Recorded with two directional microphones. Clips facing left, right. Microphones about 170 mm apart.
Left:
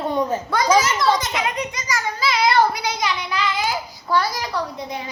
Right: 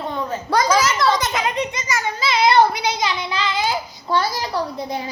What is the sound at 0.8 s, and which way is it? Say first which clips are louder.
Speech: right 1 dB; 75° right (ahead or behind).